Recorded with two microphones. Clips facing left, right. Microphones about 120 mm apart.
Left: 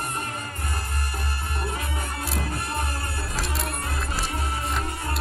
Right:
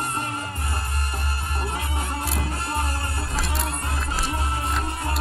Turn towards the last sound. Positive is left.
turn(degrees=0)  # may be behind; listen again after turning